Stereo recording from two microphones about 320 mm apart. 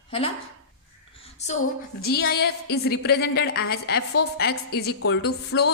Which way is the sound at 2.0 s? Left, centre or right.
Left.